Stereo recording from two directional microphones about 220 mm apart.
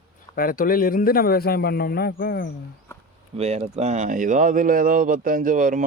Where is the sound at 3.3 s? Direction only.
30° right (ahead or behind).